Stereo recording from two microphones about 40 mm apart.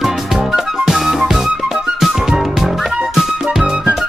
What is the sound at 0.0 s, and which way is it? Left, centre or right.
Music, centre.